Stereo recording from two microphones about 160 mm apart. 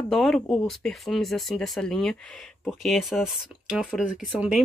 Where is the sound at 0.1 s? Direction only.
5° left (ahead or behind).